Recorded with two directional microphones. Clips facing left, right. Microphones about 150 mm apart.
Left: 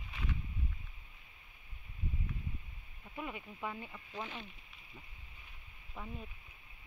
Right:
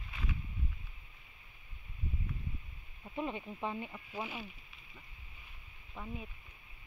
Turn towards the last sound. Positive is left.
turn(degrees=0)  # may be behind; listen again after turning